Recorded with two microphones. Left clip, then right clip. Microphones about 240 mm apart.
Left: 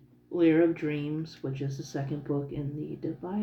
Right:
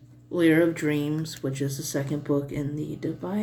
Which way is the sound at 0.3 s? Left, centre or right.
Right.